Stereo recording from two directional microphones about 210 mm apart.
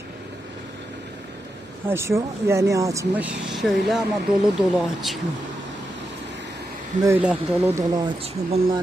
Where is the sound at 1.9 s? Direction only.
15° right (ahead or behind).